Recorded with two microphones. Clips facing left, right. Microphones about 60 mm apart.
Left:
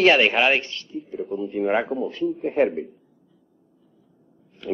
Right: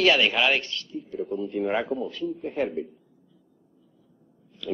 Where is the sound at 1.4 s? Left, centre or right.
Centre.